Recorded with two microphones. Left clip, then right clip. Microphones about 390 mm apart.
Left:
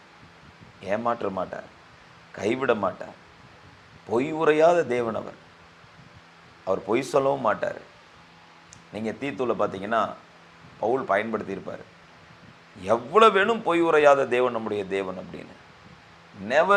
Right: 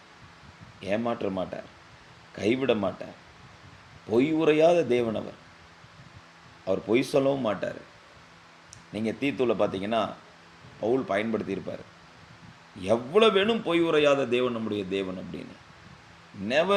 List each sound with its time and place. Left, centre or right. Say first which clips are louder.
0.8 s speech: left 3 dB; left
4.1 s speech: left 1 dB; left
6.7 s speech: left 1 dB; left
8.9 s speech: right 1 dB; left
12.8 s a man's voice: left 4 dB; left
16.5 s speech: left 4 dB; left